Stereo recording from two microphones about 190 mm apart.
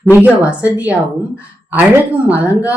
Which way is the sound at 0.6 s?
15° left (ahead or behind).